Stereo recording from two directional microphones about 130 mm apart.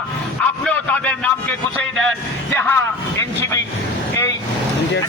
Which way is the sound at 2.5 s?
15° left (ahead or behind).